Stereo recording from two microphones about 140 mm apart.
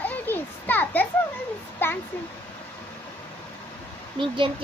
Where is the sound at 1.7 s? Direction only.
15° left (ahead or behind).